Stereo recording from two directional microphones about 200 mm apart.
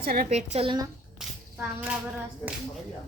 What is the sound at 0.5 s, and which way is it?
Speech, 25° right (ahead or behind).